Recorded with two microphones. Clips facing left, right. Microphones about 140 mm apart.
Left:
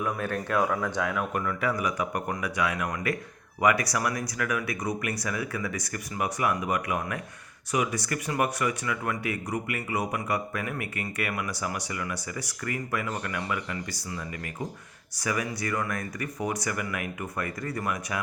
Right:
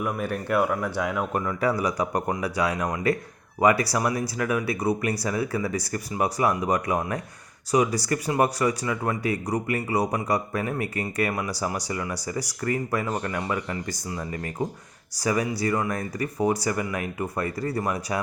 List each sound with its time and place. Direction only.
0.0 s speech: 15° right (ahead or behind)
1.1 s speech: 25° right (ahead or behind)